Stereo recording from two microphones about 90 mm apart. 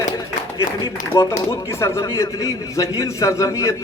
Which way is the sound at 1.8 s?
35° left (ahead or behind).